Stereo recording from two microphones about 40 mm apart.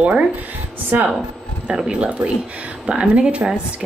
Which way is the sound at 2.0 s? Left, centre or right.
Right.